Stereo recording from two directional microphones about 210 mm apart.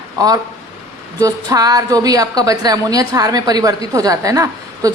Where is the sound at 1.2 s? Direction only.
15° right (ahead or behind).